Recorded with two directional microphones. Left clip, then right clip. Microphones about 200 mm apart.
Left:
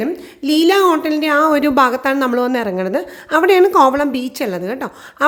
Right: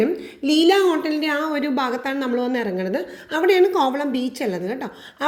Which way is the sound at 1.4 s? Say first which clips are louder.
Left 10 dB; 40° left (ahead or behind).